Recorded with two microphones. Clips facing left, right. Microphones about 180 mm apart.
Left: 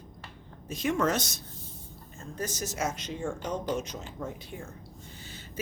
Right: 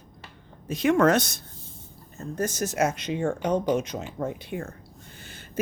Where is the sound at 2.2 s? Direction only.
50° right (ahead or behind).